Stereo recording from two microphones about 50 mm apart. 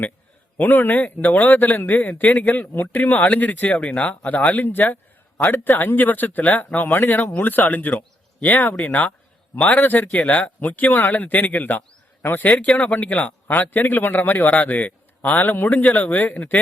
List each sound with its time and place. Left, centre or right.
0.5 s a man's voice: left
5.4 s a man's voice: left
12.8 s a man's voice: left